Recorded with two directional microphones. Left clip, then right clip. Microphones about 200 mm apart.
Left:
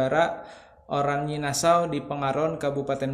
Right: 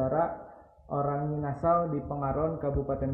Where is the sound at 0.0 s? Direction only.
40° left (ahead or behind).